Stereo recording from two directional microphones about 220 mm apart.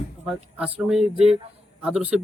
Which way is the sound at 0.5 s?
Centre (ahead or behind).